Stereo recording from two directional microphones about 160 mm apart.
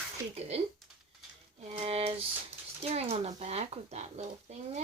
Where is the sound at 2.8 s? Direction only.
40° right (ahead or behind).